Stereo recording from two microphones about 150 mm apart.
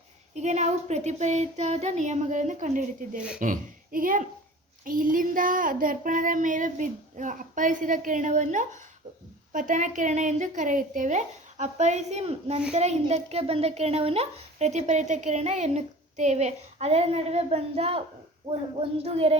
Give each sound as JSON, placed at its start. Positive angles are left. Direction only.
{"t": 0.3, "sound": "a child's voice", "side_deg": -50}
{"t": 3.2, "sound": "speech", "side_deg": -5}
{"t": 3.4, "sound": "a child's voice", "side_deg": -65}
{"t": 4.9, "sound": "a sound", "side_deg": -65}
{"t": 9.5, "sound": "a child's voice", "side_deg": -60}